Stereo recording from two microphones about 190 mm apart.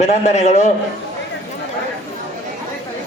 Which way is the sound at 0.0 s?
35° left (ahead or behind).